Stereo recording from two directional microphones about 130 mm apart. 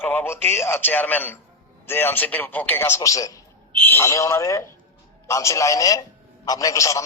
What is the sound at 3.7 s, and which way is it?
A man's voice, 15° left (ahead or behind).